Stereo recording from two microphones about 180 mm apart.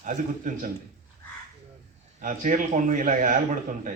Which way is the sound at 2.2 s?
45° right (ahead or behind).